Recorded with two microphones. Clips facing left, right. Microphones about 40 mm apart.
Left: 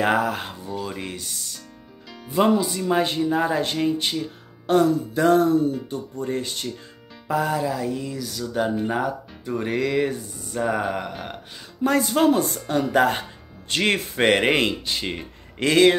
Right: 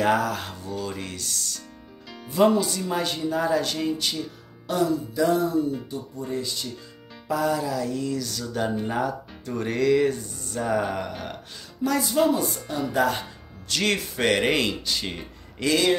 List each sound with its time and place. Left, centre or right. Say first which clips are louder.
0.0 s speech: left 1 dB; left
2.9 s speech: left 8 dB; left
4.6 s music: left 5 dB; left
7.2 s speech: left 2 dB; left; by 11.3 s centre
11.8 s music: left 3 dB; left
12.6 s speech: left 5 dB; left
15.6 s speech: left 6 dB; left